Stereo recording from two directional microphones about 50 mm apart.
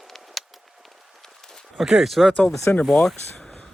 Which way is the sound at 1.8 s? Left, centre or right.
Centre.